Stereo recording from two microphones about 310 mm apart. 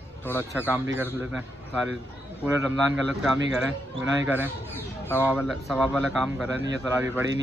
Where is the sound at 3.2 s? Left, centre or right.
Centre.